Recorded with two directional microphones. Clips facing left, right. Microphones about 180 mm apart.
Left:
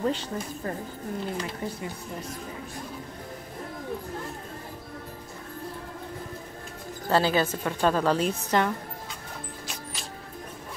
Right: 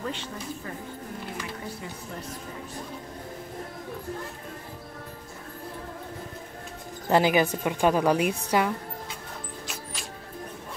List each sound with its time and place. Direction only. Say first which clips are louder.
0.0 s speech: left 6 dB; 35° left (ahead or behind)
7.1 s a woman's voice: right 2 dB; 15° right (ahead or behind)